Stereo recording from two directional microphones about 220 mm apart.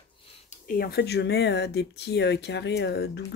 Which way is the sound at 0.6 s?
45° left (ahead or behind).